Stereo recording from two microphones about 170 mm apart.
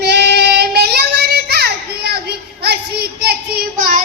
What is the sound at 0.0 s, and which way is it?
Child singing, 75° right (ahead or behind).